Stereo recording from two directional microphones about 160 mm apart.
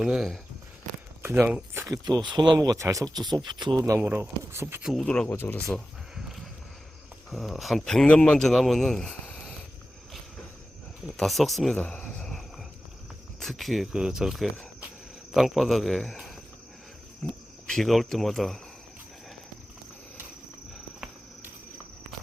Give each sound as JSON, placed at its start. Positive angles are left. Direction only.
{"t": 0.0, "sound": "a man's voice", "side_deg": -5}
{"t": 1.2, "sound": "speech", "side_deg": -15}
{"t": 3.8, "sound": "speech", "side_deg": -15}
{"t": 4.9, "sound": "a man's voice", "side_deg": 5}
{"t": 5.7, "sound": "a sound", "side_deg": 0}
{"t": 7.3, "sound": "a man's voice", "side_deg": 0}
{"t": 11.2, "sound": "speech", "side_deg": 0}
{"t": 13.4, "sound": "a man's voice", "side_deg": 0}
{"t": 17.7, "sound": "a man's voice", "side_deg": 0}